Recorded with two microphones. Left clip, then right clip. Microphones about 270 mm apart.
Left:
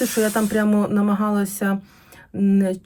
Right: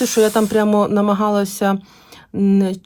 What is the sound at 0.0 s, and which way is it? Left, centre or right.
Speech, centre.